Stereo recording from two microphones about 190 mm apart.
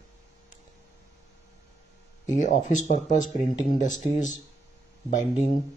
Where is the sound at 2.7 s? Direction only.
40° left (ahead or behind).